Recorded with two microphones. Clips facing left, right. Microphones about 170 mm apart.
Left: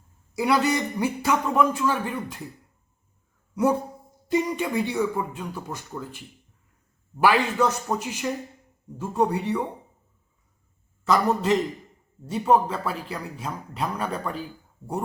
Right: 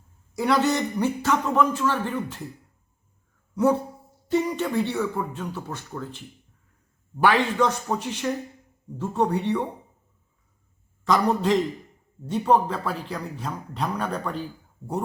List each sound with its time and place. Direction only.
0.3 s speech: 10° left (ahead or behind)
3.5 s speech: 10° left (ahead or behind)
11.0 s a man's voice: 5° left (ahead or behind)